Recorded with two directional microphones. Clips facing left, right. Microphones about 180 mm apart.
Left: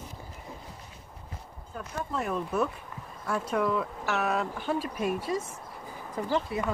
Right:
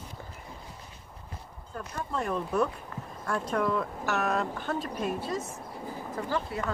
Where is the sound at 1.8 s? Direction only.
5° left (ahead or behind).